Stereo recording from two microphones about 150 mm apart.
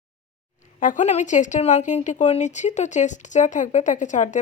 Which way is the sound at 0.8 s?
60° left (ahead or behind).